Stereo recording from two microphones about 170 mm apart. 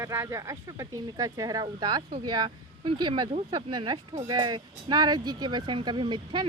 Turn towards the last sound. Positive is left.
turn(degrees=-25)  # may be behind; listen again after turning